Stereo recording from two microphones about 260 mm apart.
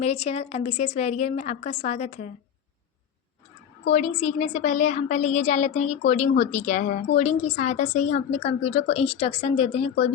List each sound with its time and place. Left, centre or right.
0.0 s a woman's voice: left
3.9 s a woman's voice: left